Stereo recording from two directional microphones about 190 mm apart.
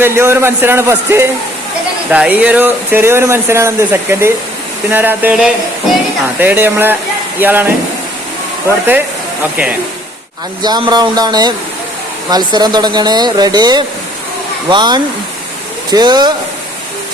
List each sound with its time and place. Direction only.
0.0 s speech: 15° right (ahead or behind)
10.6 s speech: 25° right (ahead or behind)